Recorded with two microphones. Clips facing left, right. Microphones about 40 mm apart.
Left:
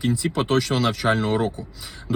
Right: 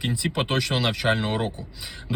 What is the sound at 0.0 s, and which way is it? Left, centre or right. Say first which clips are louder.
Speech: left 3 dB; right.